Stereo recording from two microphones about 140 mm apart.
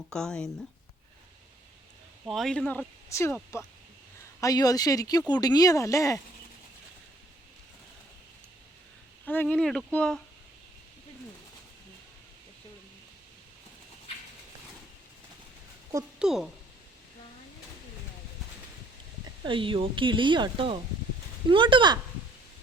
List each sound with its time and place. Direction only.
0.1 s speech: 5° left (ahead or behind)
2.2 s speech: centre (ahead or behind)
3.1 s speech: 20° left (ahead or behind)
4.4 s speech: 25° left (ahead or behind)
9.2 s speech: 15° left (ahead or behind)
16.1 s speech: 5° right (ahead or behind)
19.5 s speech: 35° right (ahead or behind)